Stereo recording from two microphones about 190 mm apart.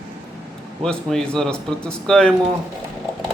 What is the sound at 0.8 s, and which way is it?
A man's voice, 5° left (ahead or behind).